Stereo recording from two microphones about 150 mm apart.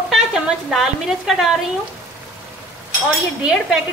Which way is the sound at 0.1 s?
Centre (ahead or behind).